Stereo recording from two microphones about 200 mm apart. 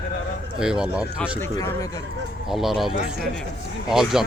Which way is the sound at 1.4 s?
10° left (ahead or behind).